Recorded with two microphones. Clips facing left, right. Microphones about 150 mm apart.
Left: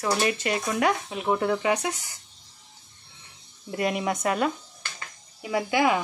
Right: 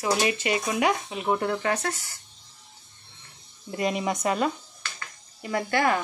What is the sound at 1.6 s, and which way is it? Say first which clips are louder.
Speech: left 2 dB; 15° left (ahead or behind).